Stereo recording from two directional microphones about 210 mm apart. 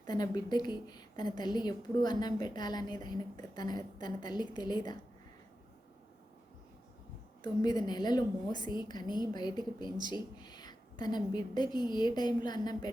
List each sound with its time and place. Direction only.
0.1 s a woman's voice: 20° left (ahead or behind)
7.4 s a woman's voice: 20° left (ahead or behind)